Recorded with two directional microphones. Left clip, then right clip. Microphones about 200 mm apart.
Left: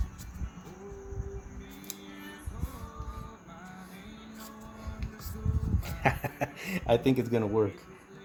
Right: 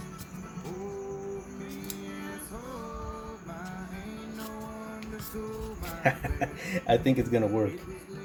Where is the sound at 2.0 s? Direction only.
40° right (ahead or behind).